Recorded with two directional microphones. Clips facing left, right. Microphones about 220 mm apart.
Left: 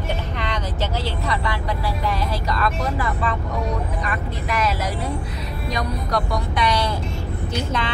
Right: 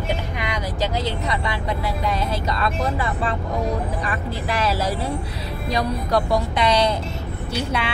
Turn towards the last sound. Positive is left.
turn(degrees=-10)  # may be behind; listen again after turning